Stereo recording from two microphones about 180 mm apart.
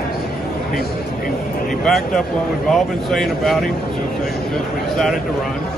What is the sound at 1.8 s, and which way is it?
Speech, 5° left (ahead or behind).